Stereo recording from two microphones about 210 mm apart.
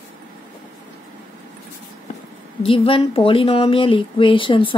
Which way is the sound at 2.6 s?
25° left (ahead or behind).